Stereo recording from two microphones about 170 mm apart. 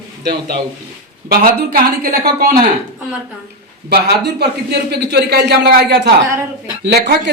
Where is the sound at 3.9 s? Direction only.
75° right (ahead or behind).